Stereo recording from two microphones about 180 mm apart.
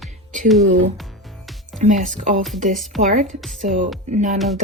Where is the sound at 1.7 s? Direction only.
45° right (ahead or behind).